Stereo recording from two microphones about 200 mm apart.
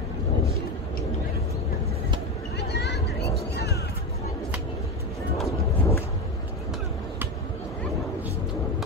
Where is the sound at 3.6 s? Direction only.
55° left (ahead or behind).